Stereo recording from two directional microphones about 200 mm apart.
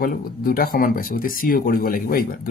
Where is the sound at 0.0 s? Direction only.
45° left (ahead or behind).